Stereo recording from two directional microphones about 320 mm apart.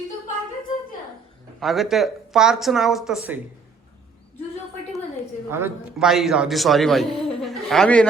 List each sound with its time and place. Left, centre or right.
1.5 s a man's voice: centre
5.5 s a man's voice: centre